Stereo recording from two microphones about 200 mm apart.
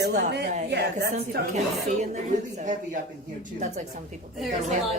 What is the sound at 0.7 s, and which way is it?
Speech, 55° right (ahead or behind).